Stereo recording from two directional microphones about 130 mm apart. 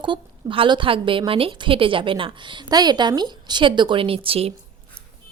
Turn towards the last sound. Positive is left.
turn(degrees=-45)  # may be behind; listen again after turning